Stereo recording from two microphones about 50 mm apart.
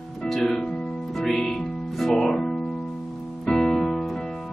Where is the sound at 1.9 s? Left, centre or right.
Centre.